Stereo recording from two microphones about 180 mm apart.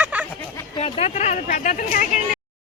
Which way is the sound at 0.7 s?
35° left (ahead or behind).